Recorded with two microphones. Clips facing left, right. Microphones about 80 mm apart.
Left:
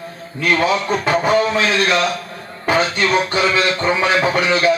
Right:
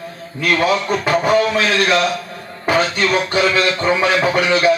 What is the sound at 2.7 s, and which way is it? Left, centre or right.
A man's voice, left.